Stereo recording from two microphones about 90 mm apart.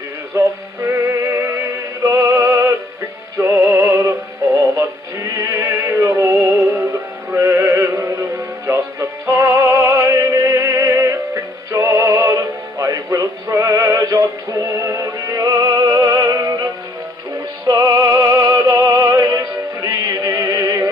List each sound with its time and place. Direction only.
0.4 s music: 30° right (ahead or behind)
3.3 s synthetic singing: 35° right (ahead or behind)
4.7 s music: 35° right (ahead or behind)
17.6 s music: 40° right (ahead or behind)